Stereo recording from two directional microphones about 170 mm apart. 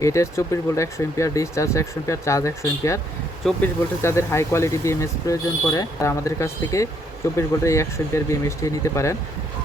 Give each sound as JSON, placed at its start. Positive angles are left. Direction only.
{"t": 0.0, "sound": "speech", "side_deg": 15}